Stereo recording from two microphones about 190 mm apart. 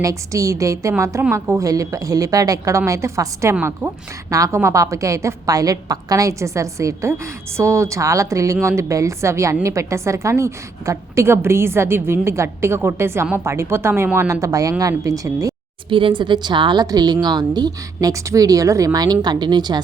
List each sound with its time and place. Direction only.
0.0 s a woman's voice: 15° right (ahead or behind)